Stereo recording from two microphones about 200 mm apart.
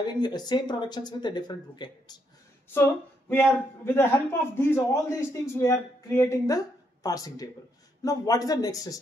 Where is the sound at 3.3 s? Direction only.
10° left (ahead or behind).